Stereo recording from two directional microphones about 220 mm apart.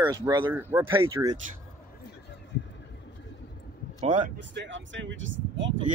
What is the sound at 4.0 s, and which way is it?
Speech, 35° right (ahead or behind).